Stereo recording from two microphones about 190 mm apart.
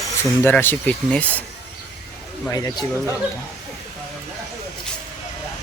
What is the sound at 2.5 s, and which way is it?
Speech, 20° left (ahead or behind).